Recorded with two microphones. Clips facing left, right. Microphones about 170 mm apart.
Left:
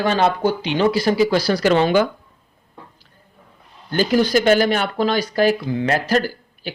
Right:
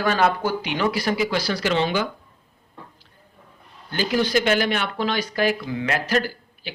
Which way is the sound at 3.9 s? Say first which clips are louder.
Left 5 dB; 45° left (ahead or behind).